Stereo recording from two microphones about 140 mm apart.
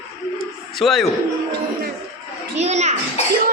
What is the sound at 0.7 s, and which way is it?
Speech, centre (ahead or behind).